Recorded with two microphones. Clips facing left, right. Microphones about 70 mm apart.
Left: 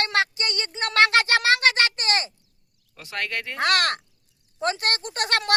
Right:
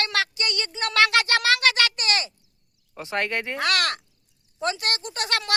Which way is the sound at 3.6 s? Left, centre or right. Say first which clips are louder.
Left 4 dB; left.